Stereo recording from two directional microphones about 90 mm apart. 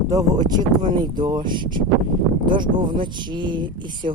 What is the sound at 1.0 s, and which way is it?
Speech, 55° right (ahead or behind).